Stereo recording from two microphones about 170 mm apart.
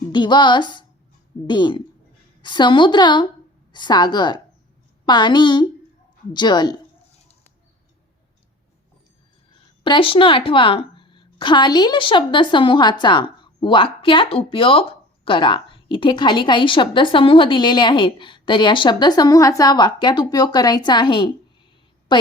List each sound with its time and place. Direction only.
0.1 s a woman's voice: 25° left (ahead or behind)
9.8 s a woman's voice: 30° left (ahead or behind)
22.1 s a sound: 25° left (ahead or behind)